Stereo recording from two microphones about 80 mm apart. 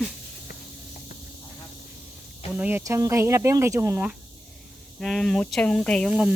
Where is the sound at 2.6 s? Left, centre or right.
Centre.